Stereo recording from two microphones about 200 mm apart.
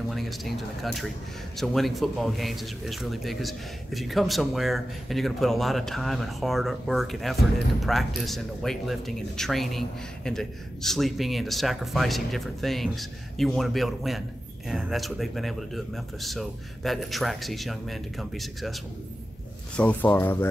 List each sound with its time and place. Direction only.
0.1 s speech: centre (ahead or behind)
19.8 s speech: 10° left (ahead or behind)